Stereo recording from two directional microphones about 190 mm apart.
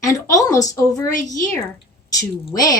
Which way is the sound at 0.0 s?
15° left (ahead or behind).